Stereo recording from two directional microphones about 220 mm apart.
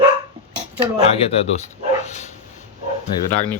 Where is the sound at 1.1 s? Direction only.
25° left (ahead or behind).